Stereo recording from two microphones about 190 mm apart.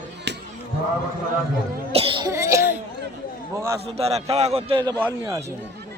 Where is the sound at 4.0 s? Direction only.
35° right (ahead or behind).